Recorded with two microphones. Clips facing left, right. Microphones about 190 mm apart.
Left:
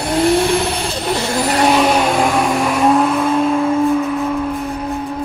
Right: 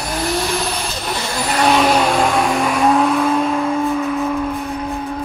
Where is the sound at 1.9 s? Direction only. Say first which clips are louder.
Left 1 dB; 5° left (ahead or behind).